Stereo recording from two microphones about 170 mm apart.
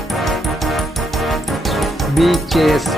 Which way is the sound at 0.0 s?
Centre (ahead or behind).